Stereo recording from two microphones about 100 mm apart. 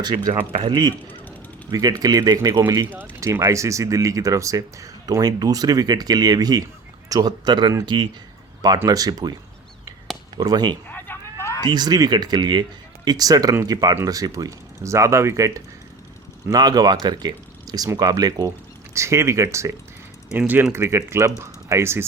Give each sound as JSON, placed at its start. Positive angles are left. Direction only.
{"t": 0.0, "sound": "speech", "side_deg": -40}
{"t": 3.2, "sound": "speech", "side_deg": -30}
{"t": 8.9, "sound": "speech", "side_deg": -40}
{"t": 10.3, "sound": "speech", "side_deg": -45}
{"t": 10.9, "sound": "a sound", "side_deg": 20}
{"t": 11.6, "sound": "speech", "side_deg": -45}
{"t": 20.3, "sound": "speech", "side_deg": -15}
{"t": 20.7, "sound": "speech", "side_deg": -25}